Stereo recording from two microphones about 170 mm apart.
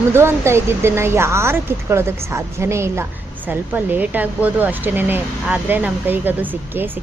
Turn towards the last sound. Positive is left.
turn(degrees=-10)  # may be behind; listen again after turning